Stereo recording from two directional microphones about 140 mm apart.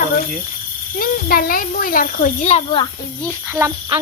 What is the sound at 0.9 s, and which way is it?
Speech, 90° left.